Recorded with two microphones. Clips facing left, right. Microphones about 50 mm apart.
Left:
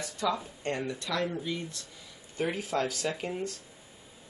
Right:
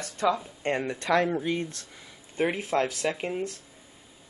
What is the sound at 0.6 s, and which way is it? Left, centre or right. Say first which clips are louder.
Speech: right 5 dB; right.